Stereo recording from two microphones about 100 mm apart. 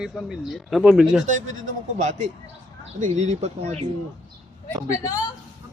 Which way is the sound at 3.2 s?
90° right.